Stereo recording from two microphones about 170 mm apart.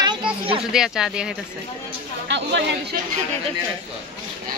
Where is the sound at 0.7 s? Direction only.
5° right (ahead or behind).